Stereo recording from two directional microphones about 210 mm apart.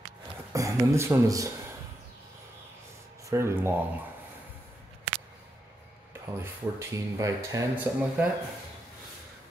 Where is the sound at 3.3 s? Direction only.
15° right (ahead or behind).